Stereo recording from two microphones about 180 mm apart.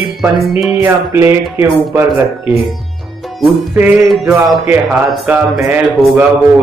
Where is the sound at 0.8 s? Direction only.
15° right (ahead or behind).